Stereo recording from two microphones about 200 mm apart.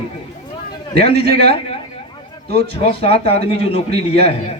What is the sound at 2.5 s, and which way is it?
A man's voice, 30° left (ahead or behind).